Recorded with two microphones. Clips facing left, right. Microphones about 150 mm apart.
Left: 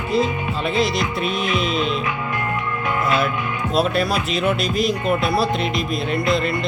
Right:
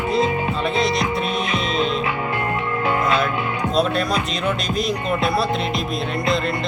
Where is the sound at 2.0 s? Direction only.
30° right (ahead or behind).